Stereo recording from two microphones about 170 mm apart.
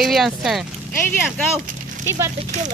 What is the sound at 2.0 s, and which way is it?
Speech, 15° right (ahead or behind).